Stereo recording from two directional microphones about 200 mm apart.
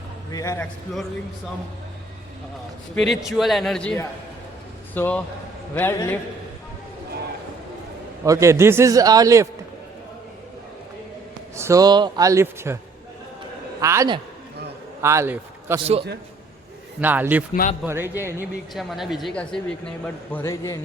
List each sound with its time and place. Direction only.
0.3 s a man's voice: 15° left (ahead or behind)
2.9 s a man's voice: centre (ahead or behind)
8.2 s a man's voice: 15° right (ahead or behind)
11.5 s a man's voice: 15° right (ahead or behind)
13.8 s a man's voice: 15° right (ahead or behind)
17.0 s a man's voice: 10° right (ahead or behind)
18.7 s a man's voice: centre (ahead or behind)